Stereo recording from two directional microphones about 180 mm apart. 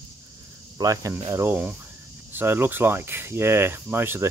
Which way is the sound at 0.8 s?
20° right (ahead or behind).